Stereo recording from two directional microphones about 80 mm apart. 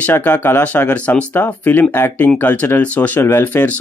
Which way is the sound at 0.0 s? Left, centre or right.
Left.